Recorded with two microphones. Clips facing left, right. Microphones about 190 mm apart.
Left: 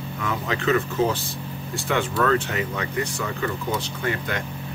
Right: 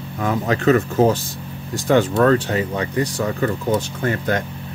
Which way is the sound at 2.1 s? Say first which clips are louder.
Right 6 dB; 35° right (ahead or behind).